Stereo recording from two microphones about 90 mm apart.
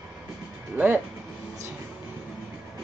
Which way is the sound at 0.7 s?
20° right (ahead or behind).